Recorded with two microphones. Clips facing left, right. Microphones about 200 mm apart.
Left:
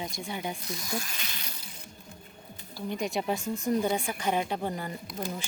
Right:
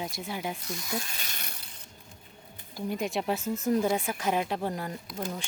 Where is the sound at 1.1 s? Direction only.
45° right (ahead or behind).